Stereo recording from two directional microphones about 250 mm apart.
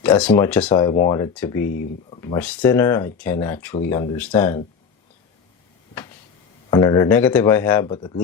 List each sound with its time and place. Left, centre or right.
0.0 s speech: centre
1.6 s speech: left
2.0 s speech: centre
6.7 s speech: centre